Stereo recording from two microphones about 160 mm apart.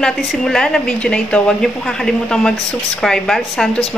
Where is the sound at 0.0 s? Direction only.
5° left (ahead or behind).